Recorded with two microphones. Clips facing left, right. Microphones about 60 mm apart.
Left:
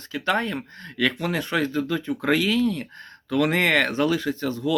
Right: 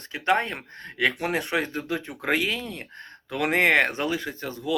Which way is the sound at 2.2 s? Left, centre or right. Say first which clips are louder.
Left 5 dB; right.